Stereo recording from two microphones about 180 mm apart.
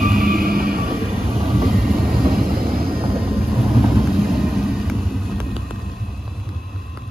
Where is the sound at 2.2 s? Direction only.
55° right (ahead or behind).